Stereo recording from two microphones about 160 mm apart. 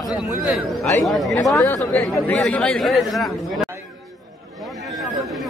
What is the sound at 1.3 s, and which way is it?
Speech, 20° left (ahead or behind).